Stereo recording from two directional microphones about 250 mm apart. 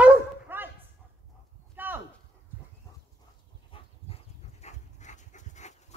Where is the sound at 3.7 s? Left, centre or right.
Left.